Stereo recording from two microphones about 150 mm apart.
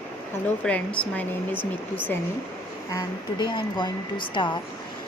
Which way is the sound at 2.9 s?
30° left (ahead or behind).